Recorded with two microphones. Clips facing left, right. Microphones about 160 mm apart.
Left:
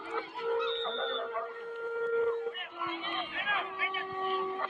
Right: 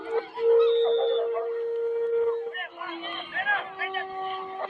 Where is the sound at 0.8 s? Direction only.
20° right (ahead or behind).